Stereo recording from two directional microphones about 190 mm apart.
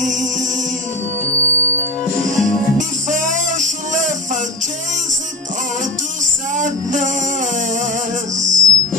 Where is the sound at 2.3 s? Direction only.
40° right (ahead or behind).